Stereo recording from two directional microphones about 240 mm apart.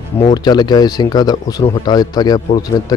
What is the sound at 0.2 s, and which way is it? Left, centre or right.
Speech, centre.